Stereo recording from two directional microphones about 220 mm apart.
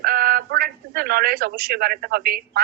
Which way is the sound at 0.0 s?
45° right (ahead or behind).